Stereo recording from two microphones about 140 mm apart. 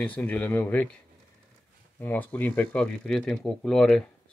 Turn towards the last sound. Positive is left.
turn(degrees=5)  # may be behind; listen again after turning